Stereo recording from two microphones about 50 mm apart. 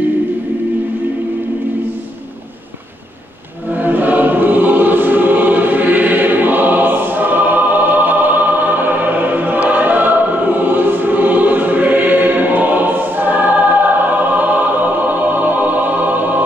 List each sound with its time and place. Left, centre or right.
3.8 s choir: right
14.4 s music: right